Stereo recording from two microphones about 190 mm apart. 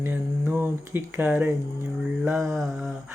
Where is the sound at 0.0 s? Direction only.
10° right (ahead or behind).